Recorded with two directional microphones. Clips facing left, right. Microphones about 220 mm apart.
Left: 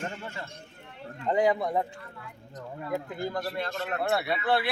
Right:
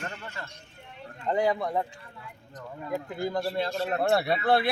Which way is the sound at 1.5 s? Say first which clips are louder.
Left 1 dB; 5° left (ahead or behind).